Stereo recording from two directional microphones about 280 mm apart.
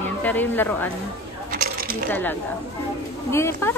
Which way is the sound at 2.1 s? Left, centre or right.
Centre.